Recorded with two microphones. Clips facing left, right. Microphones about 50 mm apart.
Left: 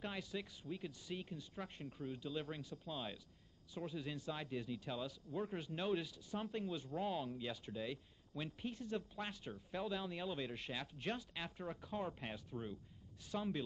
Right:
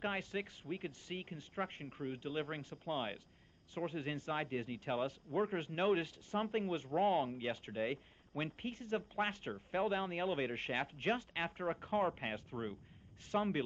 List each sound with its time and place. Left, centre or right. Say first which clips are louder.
0.0 s speech: right 6 dB; right